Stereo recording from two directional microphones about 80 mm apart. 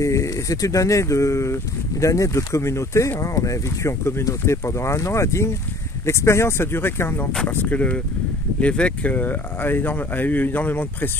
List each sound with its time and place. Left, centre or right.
0.0 s speech: left